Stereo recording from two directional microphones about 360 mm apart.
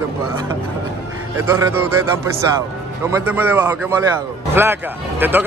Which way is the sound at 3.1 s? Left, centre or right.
Centre.